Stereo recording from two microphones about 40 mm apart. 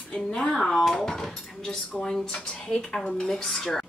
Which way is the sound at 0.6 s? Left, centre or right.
Centre.